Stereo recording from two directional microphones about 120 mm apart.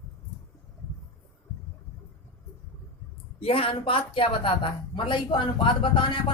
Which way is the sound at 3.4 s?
50° left (ahead or behind).